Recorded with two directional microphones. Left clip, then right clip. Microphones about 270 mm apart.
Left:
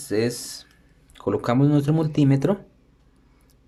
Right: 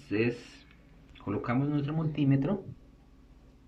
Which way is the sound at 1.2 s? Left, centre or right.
Left.